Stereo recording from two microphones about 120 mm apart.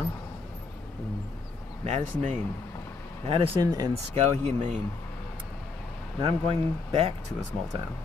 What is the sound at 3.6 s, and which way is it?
Speech, 30° right (ahead or behind).